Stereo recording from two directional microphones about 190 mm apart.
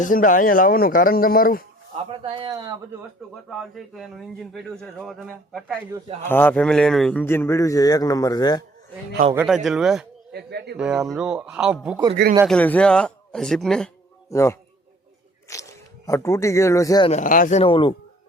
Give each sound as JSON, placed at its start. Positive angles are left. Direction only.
{"t": 0.0, "sound": "speech", "side_deg": 45}
{"t": 2.0, "sound": "a man's voice", "side_deg": -30}
{"t": 3.5, "sound": "speech", "side_deg": 0}
{"t": 6.2, "sound": "speech", "side_deg": 10}
{"t": 9.3, "sound": "speech", "side_deg": -5}
{"t": 10.3, "sound": "speech", "side_deg": -60}
{"t": 10.8, "sound": "speech", "side_deg": -5}
{"t": 12.5, "sound": "speech", "side_deg": 10}
{"t": 14.3, "sound": "speech", "side_deg": 15}
{"t": 17.1, "sound": "speech", "side_deg": 45}
{"t": 17.6, "sound": "speech", "side_deg": 25}